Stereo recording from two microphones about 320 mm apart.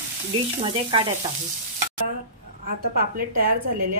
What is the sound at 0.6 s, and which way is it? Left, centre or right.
Frying, centre.